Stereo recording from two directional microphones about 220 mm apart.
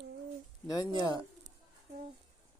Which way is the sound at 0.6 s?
15° left (ahead or behind).